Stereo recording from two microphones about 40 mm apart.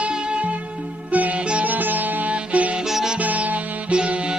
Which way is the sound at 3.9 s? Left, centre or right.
Right.